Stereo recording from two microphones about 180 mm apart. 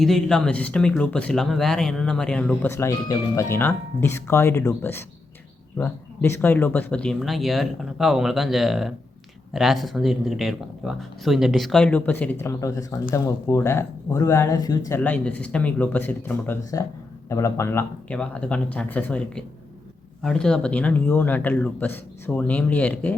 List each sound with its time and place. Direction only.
0.0 s speech: centre (ahead or behind); by 14.8 s 20° left (ahead or behind)
14.8 s speech: 10° left (ahead or behind)